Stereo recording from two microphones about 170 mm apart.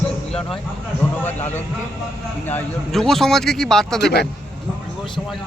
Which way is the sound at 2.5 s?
5° left (ahead or behind).